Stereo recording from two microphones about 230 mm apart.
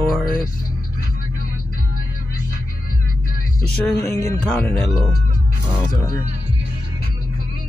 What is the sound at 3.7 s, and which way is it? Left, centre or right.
Music, centre.